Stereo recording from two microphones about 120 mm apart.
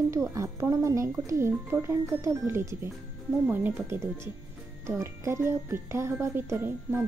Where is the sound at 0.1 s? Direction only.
25° right (ahead or behind).